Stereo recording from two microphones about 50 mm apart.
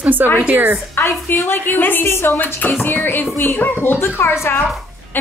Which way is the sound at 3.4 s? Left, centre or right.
Left.